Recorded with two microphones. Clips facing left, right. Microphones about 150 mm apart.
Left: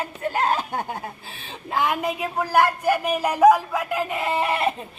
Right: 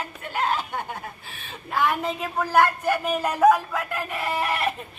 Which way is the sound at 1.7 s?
20° left (ahead or behind).